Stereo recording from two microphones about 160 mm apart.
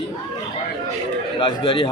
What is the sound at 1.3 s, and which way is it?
Speech, 30° left (ahead or behind).